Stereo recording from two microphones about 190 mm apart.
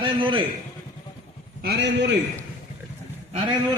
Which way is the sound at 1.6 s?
60° right (ahead or behind).